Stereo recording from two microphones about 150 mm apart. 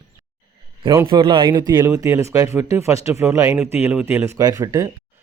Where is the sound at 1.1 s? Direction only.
30° right (ahead or behind).